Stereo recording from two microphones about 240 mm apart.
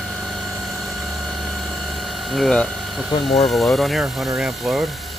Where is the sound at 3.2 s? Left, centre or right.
Left.